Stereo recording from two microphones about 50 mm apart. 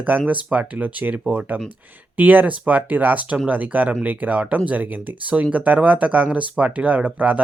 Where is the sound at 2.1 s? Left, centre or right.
Right.